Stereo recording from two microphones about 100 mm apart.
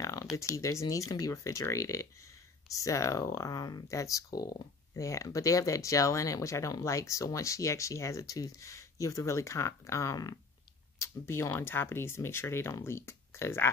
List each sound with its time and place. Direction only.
0.0 s a sound: 35° left (ahead or behind)
0.4 s speech: 30° left (ahead or behind)
11.0 s speech: 30° left (ahead or behind)